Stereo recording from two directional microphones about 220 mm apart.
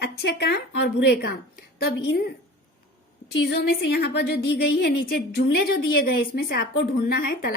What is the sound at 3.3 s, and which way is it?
A woman's voice, 50° left (ahead or behind).